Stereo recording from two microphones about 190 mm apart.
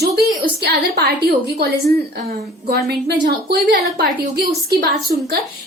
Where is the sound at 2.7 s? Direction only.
60° right (ahead or behind).